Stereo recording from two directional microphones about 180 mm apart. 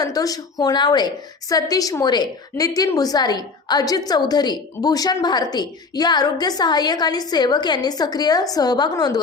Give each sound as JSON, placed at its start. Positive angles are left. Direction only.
{"t": 0.0, "sound": "a woman's voice", "side_deg": 20}